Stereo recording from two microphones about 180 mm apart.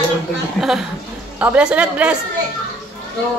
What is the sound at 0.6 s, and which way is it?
A woman's voice, centre (ahead or behind).